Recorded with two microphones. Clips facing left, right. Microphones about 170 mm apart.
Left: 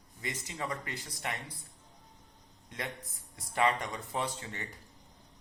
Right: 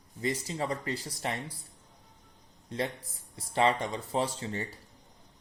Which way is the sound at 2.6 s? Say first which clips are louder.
Right 7 dB; 30° right (ahead or behind).